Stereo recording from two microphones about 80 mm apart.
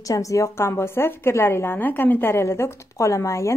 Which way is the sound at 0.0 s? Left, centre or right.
Left.